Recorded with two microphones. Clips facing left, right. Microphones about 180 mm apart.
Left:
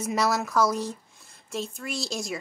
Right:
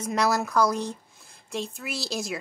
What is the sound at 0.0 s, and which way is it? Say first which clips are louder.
Speech: right 1 dB; 5° left (ahead or behind).